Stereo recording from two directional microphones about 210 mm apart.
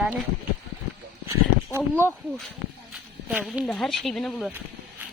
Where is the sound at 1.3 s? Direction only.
10° right (ahead or behind).